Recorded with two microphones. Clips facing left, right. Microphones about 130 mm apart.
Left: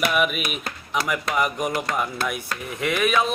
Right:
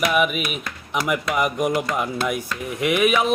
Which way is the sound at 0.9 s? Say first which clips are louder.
Right 2 dB; 10° right (ahead or behind).